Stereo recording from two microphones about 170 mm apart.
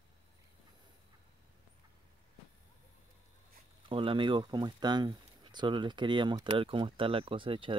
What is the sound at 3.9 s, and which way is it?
Speech, 30° right (ahead or behind).